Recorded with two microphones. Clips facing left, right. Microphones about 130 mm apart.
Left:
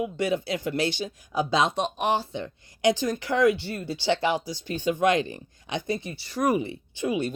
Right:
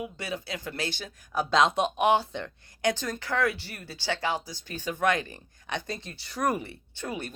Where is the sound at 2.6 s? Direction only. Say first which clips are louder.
Left 2 dB; 50° right (ahead or behind).